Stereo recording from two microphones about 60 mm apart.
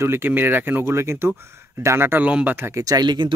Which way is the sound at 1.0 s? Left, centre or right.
Right.